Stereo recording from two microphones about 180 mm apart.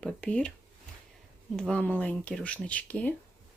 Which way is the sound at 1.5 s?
5° left (ahead or behind).